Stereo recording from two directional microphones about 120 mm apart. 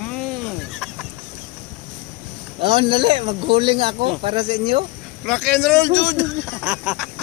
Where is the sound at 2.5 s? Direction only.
45° right (ahead or behind).